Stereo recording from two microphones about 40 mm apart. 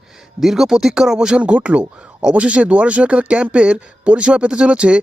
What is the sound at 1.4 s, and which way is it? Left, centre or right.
Speech, right.